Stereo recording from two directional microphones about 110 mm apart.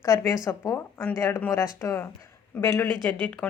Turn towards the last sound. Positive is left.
turn(degrees=15)  # may be behind; listen again after turning